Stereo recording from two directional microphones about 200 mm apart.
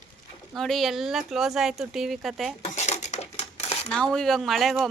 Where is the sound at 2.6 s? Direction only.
35° left (ahead or behind).